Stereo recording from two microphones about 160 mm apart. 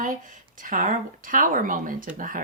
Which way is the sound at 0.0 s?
55° right (ahead or behind).